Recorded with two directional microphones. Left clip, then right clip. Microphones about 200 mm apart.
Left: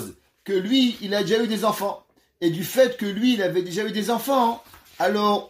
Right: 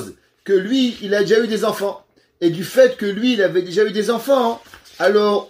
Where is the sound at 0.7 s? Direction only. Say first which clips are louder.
Right 3 dB; 20° left (ahead or behind).